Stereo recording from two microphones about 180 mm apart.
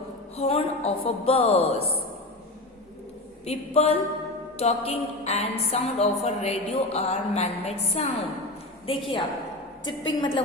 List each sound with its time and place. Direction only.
0.3 s a woman's voice: 35° left (ahead or behind)
3.4 s a woman's voice: 35° left (ahead or behind)